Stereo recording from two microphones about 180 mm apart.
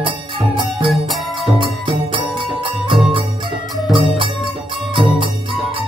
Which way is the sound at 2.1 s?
30° right (ahead or behind).